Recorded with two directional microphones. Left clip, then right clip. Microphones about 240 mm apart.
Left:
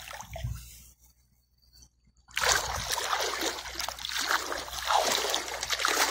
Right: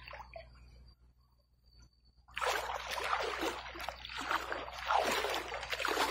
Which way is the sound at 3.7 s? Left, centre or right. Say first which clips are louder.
Left 9 dB; left.